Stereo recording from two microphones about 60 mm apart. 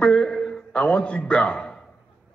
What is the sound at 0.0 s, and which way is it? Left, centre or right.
A man's voice, centre.